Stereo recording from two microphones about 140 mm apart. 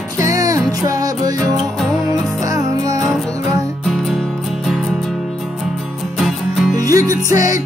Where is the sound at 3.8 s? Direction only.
Centre (ahead or behind).